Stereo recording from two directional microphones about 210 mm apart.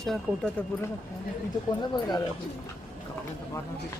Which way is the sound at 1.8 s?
20° left (ahead or behind).